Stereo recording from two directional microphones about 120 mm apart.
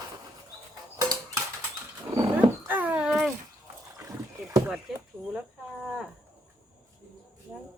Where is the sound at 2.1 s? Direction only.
45° right (ahead or behind).